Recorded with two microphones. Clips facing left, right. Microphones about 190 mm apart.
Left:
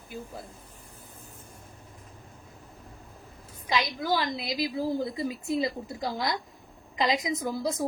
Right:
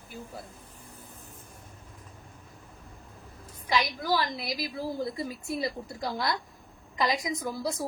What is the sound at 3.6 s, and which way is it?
A woman's voice, 20° left (ahead or behind).